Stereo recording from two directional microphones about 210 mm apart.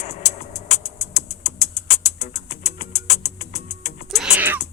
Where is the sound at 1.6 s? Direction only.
30° left (ahead or behind).